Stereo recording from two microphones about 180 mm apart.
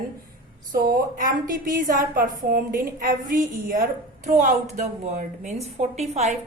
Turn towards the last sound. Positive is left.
turn(degrees=-40)  # may be behind; listen again after turning